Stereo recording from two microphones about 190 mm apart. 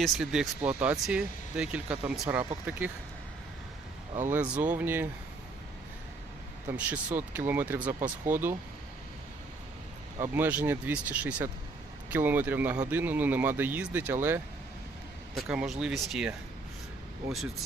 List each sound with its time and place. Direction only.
0.0 s speech: centre (ahead or behind)
2.2 s speech: 15° right (ahead or behind)
4.3 s speech: 5° right (ahead or behind)
6.7 s speech: 10° right (ahead or behind)
10.2 s speech: 10° right (ahead or behind)
15.4 s speech: centre (ahead or behind)